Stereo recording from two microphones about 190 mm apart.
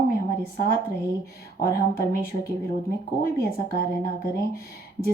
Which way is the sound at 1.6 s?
50° left (ahead or behind).